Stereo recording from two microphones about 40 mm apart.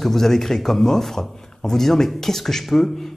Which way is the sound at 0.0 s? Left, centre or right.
Centre.